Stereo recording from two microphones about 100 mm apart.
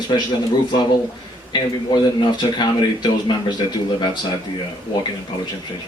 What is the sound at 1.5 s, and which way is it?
Speech, 50° left (ahead or behind).